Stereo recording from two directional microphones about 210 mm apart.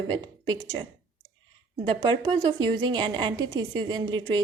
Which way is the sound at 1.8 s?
25° right (ahead or behind).